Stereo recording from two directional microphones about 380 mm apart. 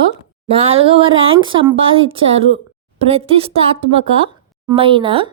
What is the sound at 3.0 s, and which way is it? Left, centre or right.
Speech, centre.